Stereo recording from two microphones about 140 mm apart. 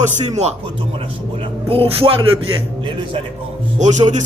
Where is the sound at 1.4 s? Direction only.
45° right (ahead or behind).